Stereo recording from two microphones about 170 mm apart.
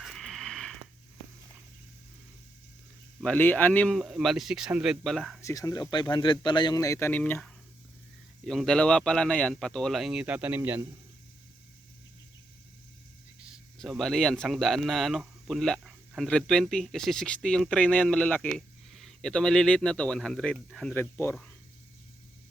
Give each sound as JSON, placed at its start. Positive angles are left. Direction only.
{"t": 0.0, "sound": "a sound", "side_deg": 0}
{"t": 3.2, "sound": "speech", "side_deg": 10}
{"t": 5.4, "sound": "speech", "side_deg": 20}
{"t": 13.5, "sound": "speech", "side_deg": 0}